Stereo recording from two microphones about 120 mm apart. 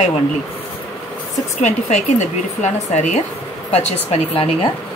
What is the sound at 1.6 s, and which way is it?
Speech, 75° left (ahead or behind).